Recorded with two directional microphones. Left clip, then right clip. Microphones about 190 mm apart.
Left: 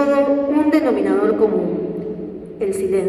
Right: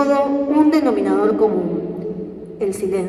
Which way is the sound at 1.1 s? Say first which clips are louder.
Even; 30° right (ahead or behind).